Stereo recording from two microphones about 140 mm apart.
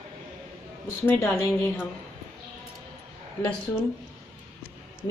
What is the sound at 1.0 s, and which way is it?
Speech, 15° left (ahead or behind).